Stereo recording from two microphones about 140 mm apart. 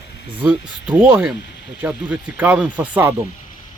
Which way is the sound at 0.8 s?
15° right (ahead or behind).